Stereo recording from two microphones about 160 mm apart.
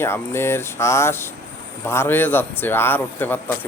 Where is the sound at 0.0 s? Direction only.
15° left (ahead or behind).